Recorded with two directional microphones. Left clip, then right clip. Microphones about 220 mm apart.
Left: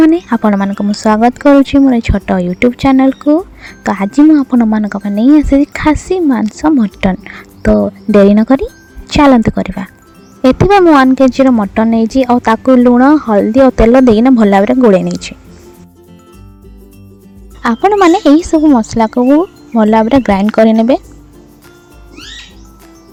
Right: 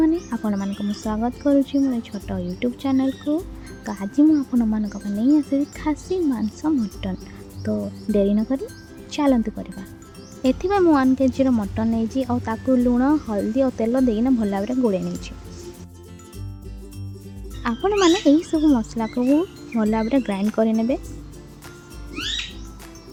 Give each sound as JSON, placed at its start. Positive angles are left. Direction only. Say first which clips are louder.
{"t": 0.0, "sound": "speech", "louder": "left 13 dB", "side_deg": 45}
{"t": 17.6, "sound": "speech", "louder": "left 11 dB", "side_deg": 40}